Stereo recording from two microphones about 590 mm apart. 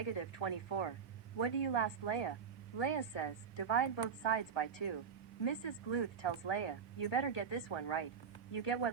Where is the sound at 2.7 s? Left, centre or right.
Left.